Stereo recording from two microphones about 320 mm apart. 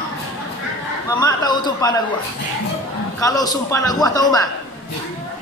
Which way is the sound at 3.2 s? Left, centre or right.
Centre.